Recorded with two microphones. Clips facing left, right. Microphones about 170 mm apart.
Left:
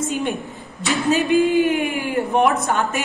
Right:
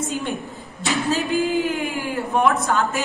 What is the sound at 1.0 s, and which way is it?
A woman's voice, 20° left (ahead or behind).